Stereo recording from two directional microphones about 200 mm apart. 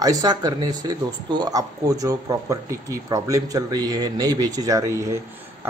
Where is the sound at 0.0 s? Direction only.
20° right (ahead or behind).